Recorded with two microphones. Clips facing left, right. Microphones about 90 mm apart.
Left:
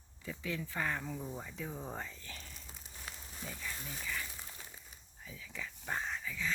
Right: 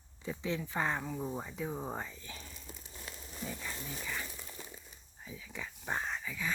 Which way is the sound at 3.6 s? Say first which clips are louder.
Right 2 dB; 20° right (ahead or behind).